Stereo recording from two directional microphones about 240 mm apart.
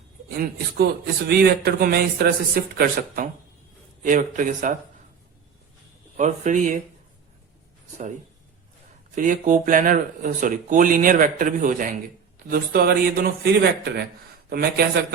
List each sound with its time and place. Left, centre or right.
1.3 s speech: right
6.1 s speech: right
9.1 s speech: right